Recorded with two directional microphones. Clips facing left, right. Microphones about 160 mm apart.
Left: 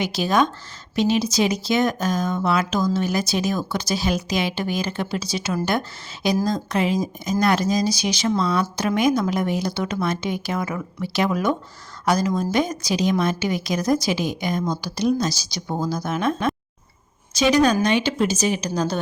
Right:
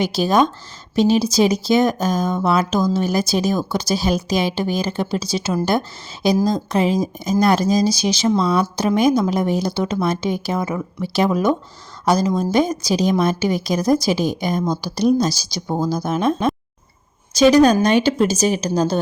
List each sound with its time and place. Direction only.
0.0 s a woman's voice: 35° right (ahead or behind)